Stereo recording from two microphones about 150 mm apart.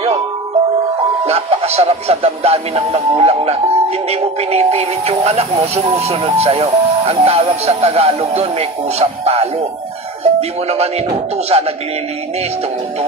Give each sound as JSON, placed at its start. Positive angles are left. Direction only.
{"t": 1.2, "sound": "speech", "side_deg": -45}